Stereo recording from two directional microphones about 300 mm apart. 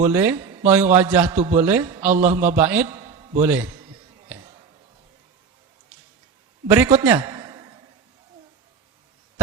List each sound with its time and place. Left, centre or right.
0.0 s a man's voice: centre
2.1 s a man's voice: right
2.6 s a sound: centre
3.4 s a man's voice: centre
6.7 s a man's voice: centre